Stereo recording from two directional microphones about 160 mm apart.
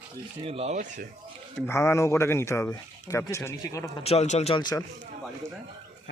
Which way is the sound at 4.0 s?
40° left (ahead or behind).